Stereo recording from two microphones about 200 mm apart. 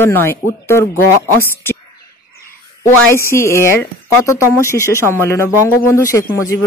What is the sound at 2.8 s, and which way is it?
Speech, 15° left (ahead or behind).